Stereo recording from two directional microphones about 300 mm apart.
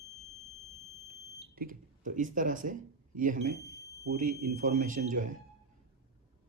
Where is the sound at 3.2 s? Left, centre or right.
Right.